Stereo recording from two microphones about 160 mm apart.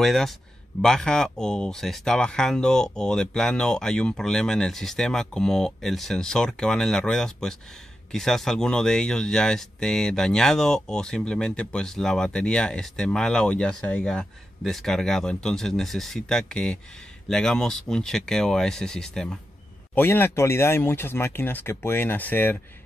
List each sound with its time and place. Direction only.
0.0 s speech: centre (ahead or behind)